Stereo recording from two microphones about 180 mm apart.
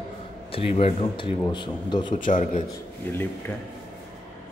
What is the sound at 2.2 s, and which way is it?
Speech, 45° left (ahead or behind).